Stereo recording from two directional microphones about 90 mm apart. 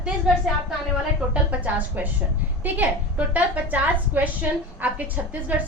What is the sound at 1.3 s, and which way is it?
Speech, 15° right (ahead or behind).